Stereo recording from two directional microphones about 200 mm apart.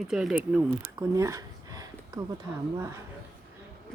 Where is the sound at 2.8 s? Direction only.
15° right (ahead or behind).